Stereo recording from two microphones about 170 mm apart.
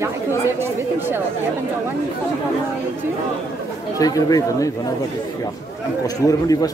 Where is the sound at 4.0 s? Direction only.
20° left (ahead or behind).